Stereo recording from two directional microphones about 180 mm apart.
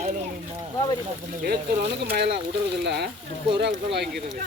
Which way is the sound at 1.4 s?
65° right (ahead or behind).